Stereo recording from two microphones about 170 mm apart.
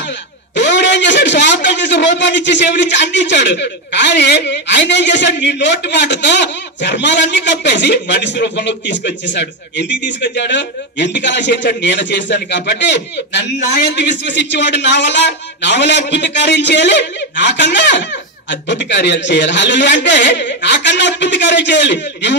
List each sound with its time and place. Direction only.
0.6 s a man's voice: 90° left